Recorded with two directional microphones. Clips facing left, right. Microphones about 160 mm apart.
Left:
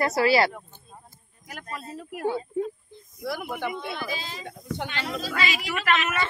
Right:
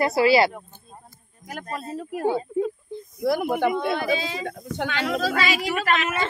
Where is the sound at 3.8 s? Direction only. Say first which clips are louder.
Right 9 dB; 65° right (ahead or behind); by 5.3 s 85° right.